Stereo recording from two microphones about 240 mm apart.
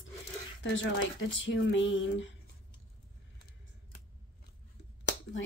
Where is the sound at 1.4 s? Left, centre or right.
Left.